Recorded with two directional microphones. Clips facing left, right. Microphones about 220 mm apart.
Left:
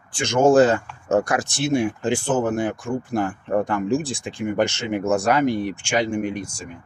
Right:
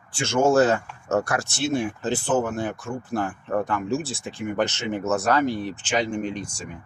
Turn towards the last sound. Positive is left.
turn(degrees=10)  # may be behind; listen again after turning